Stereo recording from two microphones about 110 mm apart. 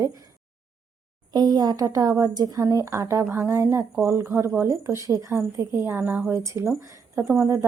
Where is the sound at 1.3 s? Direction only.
40° right (ahead or behind).